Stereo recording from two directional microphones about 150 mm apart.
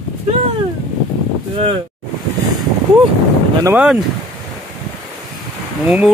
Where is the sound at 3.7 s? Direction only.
10° right (ahead or behind).